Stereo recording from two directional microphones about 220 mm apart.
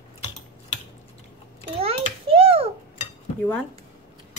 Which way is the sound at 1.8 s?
25° right (ahead or behind).